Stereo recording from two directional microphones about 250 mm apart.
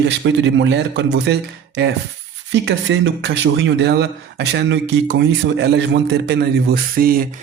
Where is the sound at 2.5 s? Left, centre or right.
Right.